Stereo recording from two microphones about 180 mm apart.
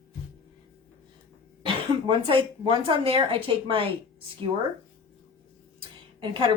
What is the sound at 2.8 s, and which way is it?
Speech, 30° right (ahead or behind).